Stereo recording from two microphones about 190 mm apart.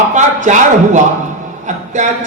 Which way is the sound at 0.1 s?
40° right (ahead or behind).